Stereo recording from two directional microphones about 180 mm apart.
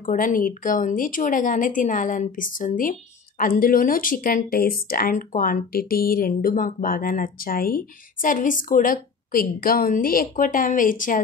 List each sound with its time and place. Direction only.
0.1 s speech: 50° left (ahead or behind)